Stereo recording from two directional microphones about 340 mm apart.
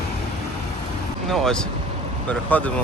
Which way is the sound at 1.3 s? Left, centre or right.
Centre.